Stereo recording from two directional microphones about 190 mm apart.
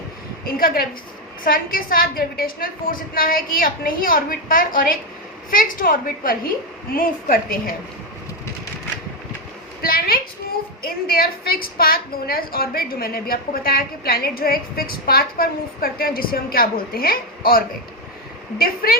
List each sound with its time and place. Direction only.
0.4 s a woman's voice: 50° left (ahead or behind)
9.8 s a woman's voice: 50° left (ahead or behind)
18.6 s a woman's voice: 50° left (ahead or behind)